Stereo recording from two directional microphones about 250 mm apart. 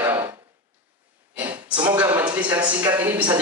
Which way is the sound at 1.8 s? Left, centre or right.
Centre.